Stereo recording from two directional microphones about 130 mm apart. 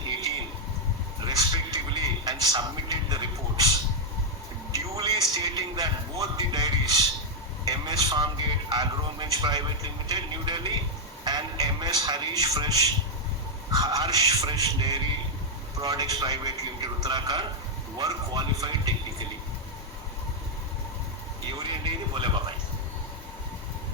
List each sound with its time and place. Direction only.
1.2 s television: 30° right (ahead or behind)
4.7 s a sound: 30° right (ahead or behind)
11.3 s music: 35° right (ahead or behind)
13.7 s a man's voice: 30° right (ahead or behind)
21.6 s music: 40° right (ahead or behind)